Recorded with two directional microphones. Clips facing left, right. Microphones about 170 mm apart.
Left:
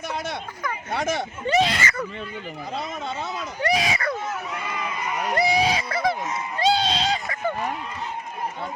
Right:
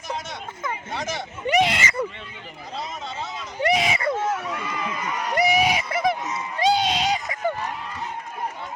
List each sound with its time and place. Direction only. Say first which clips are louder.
0.9 s speech: left 8 dB; 55° left (ahead or behind)
1.5 s speech: right 1 dB; 15° right (ahead or behind)
3.6 s speech: right 2 dB; 20° right (ahead or behind)
5.4 s a sound: right 2 dB; 20° right (ahead or behind)